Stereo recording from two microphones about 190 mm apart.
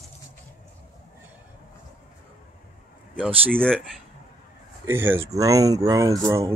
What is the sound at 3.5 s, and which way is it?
Speech, 5° left (ahead or behind).